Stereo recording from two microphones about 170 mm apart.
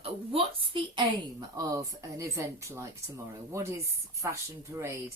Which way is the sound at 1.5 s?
20° right (ahead or behind).